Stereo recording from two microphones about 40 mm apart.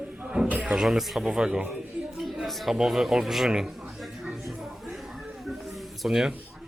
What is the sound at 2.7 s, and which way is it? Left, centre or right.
Speech, centre.